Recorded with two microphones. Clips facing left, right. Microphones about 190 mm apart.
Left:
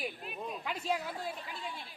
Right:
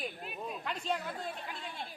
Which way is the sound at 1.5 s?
55° right (ahead or behind).